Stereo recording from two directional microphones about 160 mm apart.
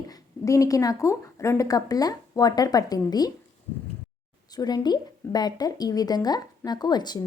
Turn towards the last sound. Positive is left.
turn(degrees=25)  # may be behind; listen again after turning